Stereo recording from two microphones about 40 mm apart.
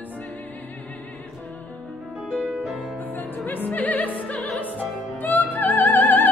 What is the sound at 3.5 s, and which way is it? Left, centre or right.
Music, left.